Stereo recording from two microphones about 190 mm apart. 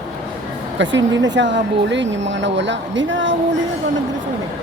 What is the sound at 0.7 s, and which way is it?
Speech, 75° right (ahead or behind).